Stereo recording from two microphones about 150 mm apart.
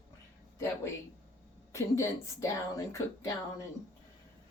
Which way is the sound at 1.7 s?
20° left (ahead or behind).